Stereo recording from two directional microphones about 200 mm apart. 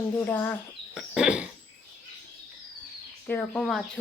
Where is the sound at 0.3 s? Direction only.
10° left (ahead or behind).